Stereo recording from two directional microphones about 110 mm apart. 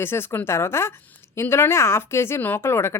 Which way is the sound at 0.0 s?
20° left (ahead or behind).